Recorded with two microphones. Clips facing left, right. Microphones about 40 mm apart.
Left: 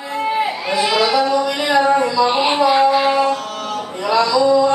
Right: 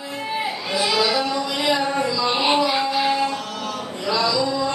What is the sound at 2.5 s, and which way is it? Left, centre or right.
Music, left.